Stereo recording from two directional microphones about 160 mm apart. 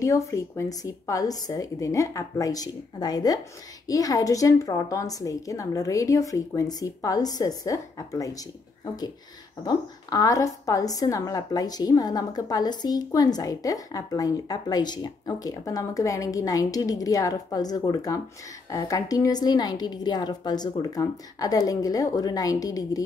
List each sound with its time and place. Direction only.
0.0 s a woman's voice: 20° left (ahead or behind)
9.6 s a woman's voice: 25° left (ahead or behind)